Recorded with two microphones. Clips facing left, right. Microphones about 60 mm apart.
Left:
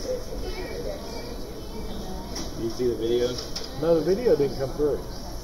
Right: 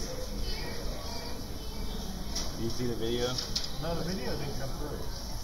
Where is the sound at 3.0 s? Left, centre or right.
Centre.